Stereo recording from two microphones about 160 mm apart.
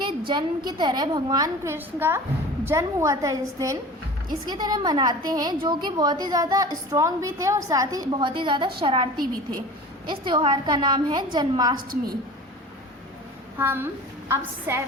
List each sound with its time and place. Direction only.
0.0 s a woman's voice: 30° right (ahead or behind)
10.1 s a woman's voice: 30° right (ahead or behind)
11.8 s a woman's voice: 60° right (ahead or behind)
13.6 s a woman's voice: 15° right (ahead or behind)